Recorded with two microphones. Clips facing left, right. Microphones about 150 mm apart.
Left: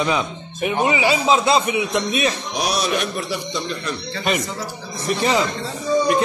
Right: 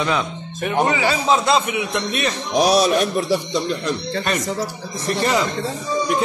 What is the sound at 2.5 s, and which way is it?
A man's voice, 35° right (ahead or behind).